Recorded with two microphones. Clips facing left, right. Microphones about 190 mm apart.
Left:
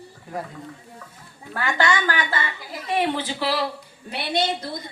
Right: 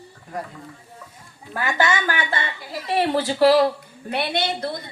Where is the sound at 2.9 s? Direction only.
35° right (ahead or behind).